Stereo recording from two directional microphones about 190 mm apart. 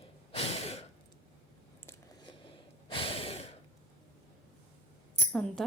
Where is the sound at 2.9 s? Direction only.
30° left (ahead or behind).